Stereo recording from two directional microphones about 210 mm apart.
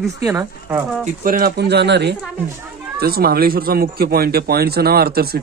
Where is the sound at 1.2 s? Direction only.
45° right (ahead or behind).